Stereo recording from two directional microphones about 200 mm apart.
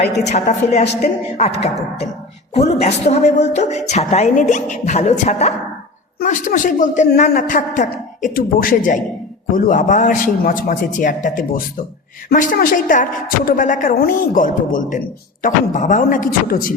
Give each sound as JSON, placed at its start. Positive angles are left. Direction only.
{"t": 0.3, "sound": "a woman's voice", "side_deg": 35}